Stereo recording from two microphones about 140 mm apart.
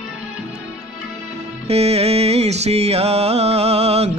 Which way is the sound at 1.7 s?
45° right (ahead or behind).